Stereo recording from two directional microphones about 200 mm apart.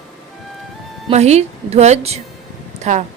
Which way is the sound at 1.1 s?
35° right (ahead or behind).